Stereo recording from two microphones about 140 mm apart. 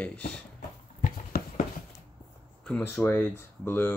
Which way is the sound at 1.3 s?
90° left.